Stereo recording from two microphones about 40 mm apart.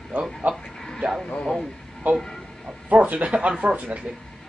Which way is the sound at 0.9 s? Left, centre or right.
Centre.